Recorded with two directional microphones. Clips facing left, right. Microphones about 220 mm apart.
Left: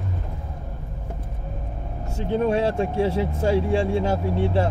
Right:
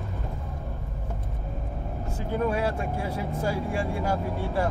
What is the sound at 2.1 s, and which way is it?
Speech, 25° left (ahead or behind).